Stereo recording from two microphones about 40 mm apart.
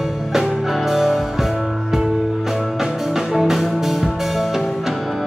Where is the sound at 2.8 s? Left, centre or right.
Centre.